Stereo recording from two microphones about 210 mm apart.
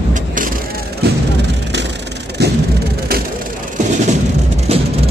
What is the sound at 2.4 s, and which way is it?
Vehicle, 50° right (ahead or behind).